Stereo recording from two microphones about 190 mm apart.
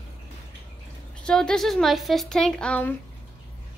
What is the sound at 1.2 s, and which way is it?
Speech, 5° left (ahead or behind).